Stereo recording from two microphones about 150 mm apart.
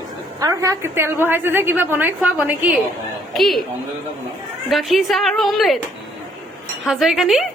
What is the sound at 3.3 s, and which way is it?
Speech, centre (ahead or behind).